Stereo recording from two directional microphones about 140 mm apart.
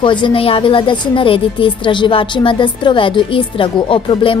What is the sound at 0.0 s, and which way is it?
A woman's voice, 35° left (ahead or behind).